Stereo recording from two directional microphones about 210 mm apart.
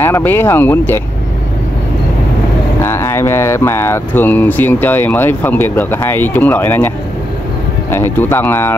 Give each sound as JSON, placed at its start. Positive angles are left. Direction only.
{"t": 0.0, "sound": "speech", "side_deg": 10}
{"t": 2.8, "sound": "speech", "side_deg": 10}
{"t": 7.9, "sound": "speech", "side_deg": 10}